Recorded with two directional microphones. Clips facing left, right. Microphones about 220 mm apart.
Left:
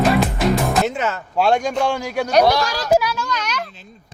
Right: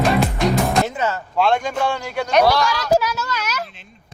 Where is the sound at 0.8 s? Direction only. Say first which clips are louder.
Left 1 dB; 75° left (ahead or behind).